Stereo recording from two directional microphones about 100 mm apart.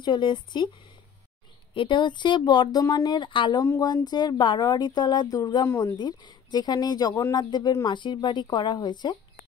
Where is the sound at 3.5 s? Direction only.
35° left (ahead or behind).